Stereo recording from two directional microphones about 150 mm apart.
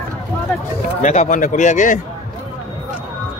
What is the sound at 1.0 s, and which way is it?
Speech, 50° left (ahead or behind).